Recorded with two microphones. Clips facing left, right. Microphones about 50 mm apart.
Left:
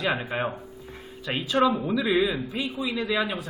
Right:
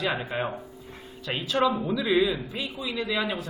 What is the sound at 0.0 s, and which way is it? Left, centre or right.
A man's voice, centre.